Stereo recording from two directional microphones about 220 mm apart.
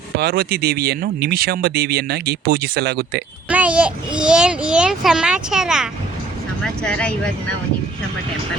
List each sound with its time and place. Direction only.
0.2 s speech: 45° right (ahead or behind)
3.5 s a child's voice: 5° right (ahead or behind)